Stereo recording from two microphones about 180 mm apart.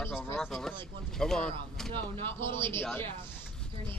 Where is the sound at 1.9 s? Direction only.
25° right (ahead or behind).